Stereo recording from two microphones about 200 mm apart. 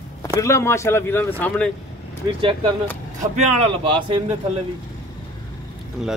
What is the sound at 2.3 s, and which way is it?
A man's voice, 25° right (ahead or behind).